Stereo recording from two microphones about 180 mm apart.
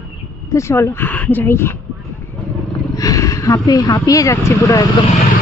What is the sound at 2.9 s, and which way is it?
Speech, 20° left (ahead or behind).